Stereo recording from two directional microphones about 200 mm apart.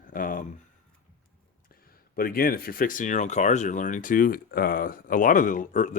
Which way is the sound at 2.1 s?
45° left (ahead or behind).